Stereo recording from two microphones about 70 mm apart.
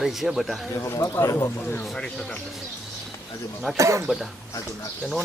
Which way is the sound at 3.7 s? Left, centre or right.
Right.